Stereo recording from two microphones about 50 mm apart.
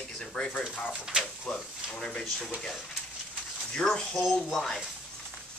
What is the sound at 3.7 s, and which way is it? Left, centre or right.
A man's voice, centre.